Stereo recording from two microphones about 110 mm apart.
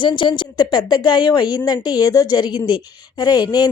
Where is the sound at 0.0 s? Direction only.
45° left (ahead or behind).